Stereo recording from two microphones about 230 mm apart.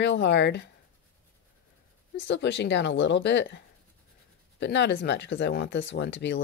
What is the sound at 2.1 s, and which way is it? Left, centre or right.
Speech, left.